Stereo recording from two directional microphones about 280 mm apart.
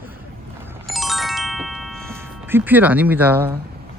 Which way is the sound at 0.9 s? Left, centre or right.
Centre.